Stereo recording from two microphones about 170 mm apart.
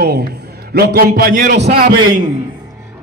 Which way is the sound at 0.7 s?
60° right (ahead or behind).